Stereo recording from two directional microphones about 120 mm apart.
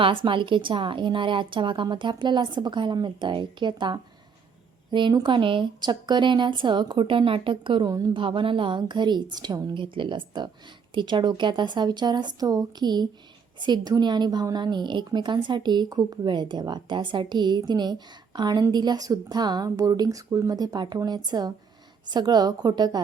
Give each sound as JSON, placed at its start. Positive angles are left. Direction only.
{"t": 0.0, "sound": "a woman's voice", "side_deg": -45}